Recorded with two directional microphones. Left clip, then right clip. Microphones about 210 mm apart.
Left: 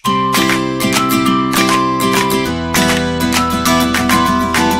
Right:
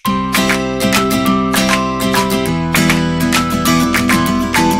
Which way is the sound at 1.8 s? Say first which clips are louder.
Left 3 dB; 45° left (ahead or behind).